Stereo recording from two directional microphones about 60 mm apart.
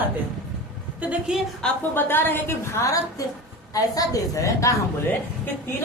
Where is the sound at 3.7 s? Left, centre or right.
Left.